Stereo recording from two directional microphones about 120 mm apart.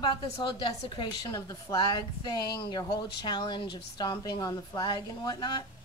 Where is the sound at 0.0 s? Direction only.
40° left (ahead or behind).